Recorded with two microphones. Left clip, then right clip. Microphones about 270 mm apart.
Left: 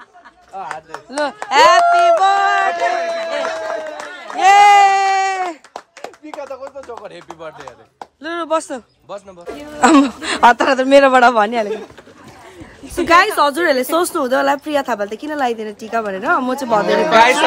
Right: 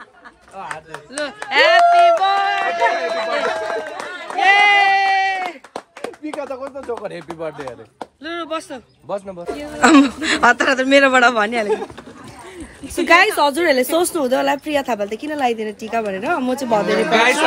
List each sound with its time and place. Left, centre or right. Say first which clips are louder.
0.6 s speech: left 3 dB; left
1.5 s speech: left 2 dB; centre
2.5 s run: left 2 dB; left
4.6 s a sound: left 6 dB; centre
6.2 s speech: right 2 dB; right
8.2 s speech: left 6 dB; centre
13.0 s speech: left 1 dB; centre
16.9 s speech: left 5 dB; left